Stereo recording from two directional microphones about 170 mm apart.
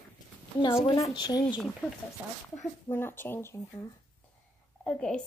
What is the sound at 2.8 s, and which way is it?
Speech, 15° left (ahead or behind).